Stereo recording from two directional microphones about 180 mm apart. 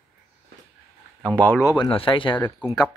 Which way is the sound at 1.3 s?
10° left (ahead or behind).